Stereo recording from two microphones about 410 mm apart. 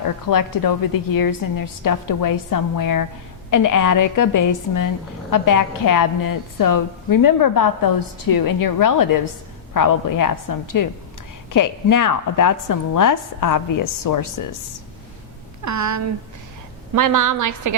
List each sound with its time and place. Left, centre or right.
0.0 s a woman's voice: left
15.6 s a woman's voice: right